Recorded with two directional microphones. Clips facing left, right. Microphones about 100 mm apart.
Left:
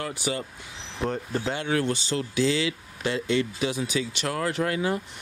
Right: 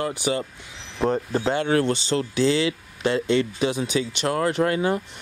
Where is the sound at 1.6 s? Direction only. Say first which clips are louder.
Right 5 dB; 45° right (ahead or behind).